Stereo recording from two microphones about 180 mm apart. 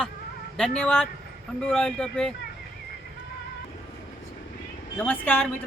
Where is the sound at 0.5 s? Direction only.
5° left (ahead or behind).